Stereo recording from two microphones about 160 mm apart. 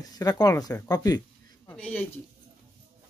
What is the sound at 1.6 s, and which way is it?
Speech, 10° left (ahead or behind).